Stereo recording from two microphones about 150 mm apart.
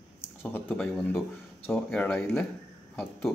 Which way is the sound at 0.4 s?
15° left (ahead or behind).